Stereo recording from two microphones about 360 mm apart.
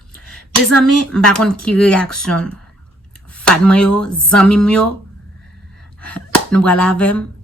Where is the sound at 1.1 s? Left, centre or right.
Centre.